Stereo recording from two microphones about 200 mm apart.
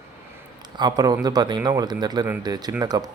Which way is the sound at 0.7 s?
20° right (ahead or behind).